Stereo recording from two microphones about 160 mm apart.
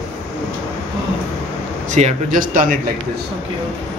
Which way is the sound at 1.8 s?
50° right (ahead or behind).